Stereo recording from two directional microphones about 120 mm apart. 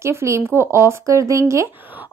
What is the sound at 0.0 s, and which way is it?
A woman's voice, 25° right (ahead or behind).